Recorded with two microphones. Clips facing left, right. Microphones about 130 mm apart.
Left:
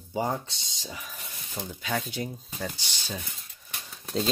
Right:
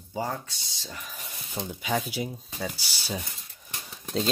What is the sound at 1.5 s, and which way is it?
Speech, 15° right (ahead or behind).